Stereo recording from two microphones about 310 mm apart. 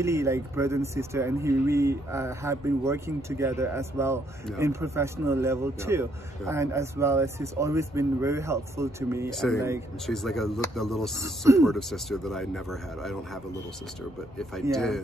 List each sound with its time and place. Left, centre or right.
0.0 s speech: centre
11.0 s speech: centre
11.6 s speech: centre
14.4 s speech: centre